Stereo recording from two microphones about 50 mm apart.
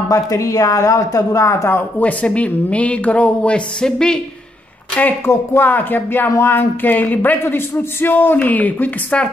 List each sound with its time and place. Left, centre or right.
0.1 s speech: left
2.0 s speech: left
5.2 s speech: left
5.7 s speech: left